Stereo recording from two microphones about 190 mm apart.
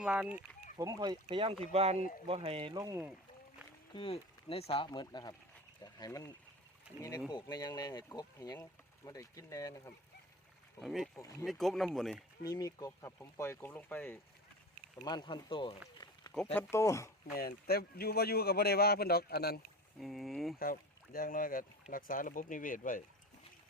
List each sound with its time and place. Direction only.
0.0 s speech: 5° right (ahead or behind)
0.8 s speech: 20° right (ahead or behind)
3.9 s speech: 30° left (ahead or behind)
7.4 s speech: 20° left (ahead or behind)
10.8 s speech: centre (ahead or behind)
11.2 s speech: 15° left (ahead or behind)
11.4 s speech: centre (ahead or behind)
12.5 s speech: 15° left (ahead or behind)
15.0 s speech: 25° left (ahead or behind)
16.7 s speech: 15° left (ahead or behind)
17.3 s speech: 55° left (ahead or behind)
20.0 s speech: centre (ahead or behind)
20.6 s speech: 50° left (ahead or behind)